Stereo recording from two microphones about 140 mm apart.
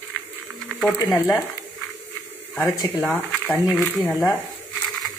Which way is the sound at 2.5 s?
20° left (ahead or behind).